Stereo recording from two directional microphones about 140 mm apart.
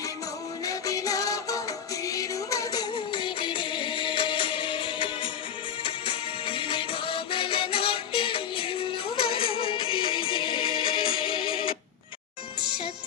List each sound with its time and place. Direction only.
0.6 s music: 25° left (ahead or behind)